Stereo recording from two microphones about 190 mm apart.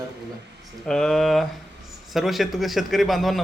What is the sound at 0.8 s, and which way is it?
Speech, 5° left (ahead or behind).